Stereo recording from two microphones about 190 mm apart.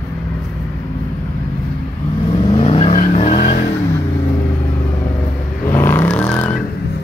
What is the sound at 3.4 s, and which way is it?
Vehicle, 55° left (ahead or behind).